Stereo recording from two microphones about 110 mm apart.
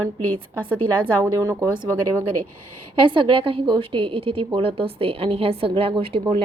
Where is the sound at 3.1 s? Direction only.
50° right (ahead or behind).